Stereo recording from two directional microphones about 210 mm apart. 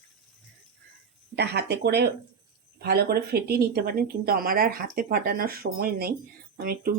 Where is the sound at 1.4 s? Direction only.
50° right (ahead or behind).